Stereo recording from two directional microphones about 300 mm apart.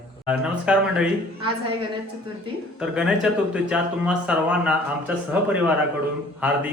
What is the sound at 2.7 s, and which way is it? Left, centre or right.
Speech, centre.